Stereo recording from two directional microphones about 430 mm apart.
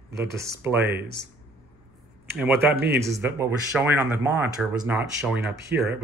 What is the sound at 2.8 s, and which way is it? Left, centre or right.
Speech, right.